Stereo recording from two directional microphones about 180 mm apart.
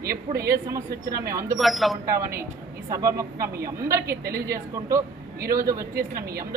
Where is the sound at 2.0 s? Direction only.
15° right (ahead or behind).